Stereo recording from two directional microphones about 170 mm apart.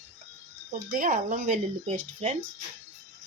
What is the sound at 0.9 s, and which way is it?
Speech, 50° right (ahead or behind).